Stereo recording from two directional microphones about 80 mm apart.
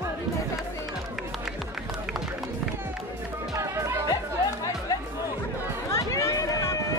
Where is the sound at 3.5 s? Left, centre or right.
Right.